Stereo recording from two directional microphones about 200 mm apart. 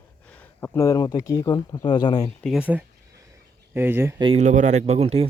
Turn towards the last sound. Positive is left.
turn(degrees=-30)  # may be behind; listen again after turning